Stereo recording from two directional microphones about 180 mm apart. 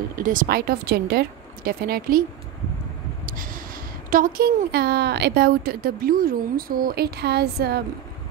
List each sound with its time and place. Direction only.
0.1 s a woman's voice: 50° right (ahead or behind)
3.3 s a woman's voice: 50° right (ahead or behind)